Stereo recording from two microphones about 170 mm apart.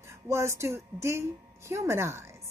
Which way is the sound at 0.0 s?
15° right (ahead or behind).